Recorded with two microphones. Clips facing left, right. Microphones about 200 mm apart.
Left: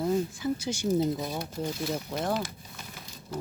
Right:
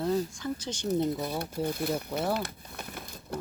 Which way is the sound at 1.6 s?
60° right (ahead or behind).